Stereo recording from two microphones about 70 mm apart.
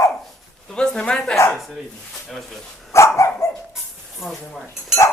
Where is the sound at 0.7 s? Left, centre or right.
Centre.